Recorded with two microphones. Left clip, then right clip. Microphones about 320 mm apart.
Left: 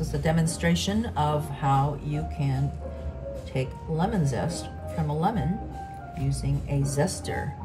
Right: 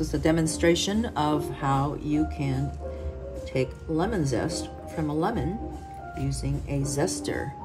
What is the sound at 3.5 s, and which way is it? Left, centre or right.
Speech, centre.